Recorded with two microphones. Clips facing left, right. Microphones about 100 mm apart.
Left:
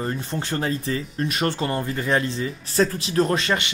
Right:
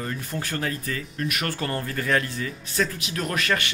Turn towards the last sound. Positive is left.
turn(degrees=25)  # may be behind; listen again after turning